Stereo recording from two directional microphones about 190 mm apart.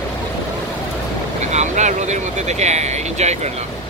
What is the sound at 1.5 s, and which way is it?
Speech, 40° right (ahead or behind).